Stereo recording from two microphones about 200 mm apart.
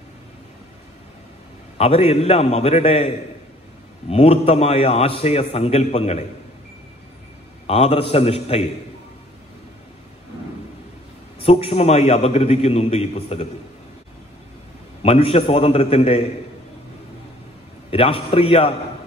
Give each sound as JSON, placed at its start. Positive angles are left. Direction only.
{"t": 1.8, "sound": "a man's voice", "side_deg": 30}
{"t": 4.1, "sound": "a man's voice", "side_deg": 30}
{"t": 7.6, "sound": "a man's voice", "side_deg": 30}
{"t": 11.3, "sound": "a man's voice", "side_deg": 30}
{"t": 15.0, "sound": "a man's voice", "side_deg": 30}
{"t": 17.9, "sound": "a man's voice", "side_deg": 25}